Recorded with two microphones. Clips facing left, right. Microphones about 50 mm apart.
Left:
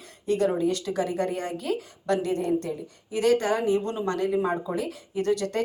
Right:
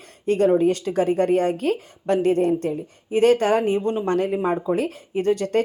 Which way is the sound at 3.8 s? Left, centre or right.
Right.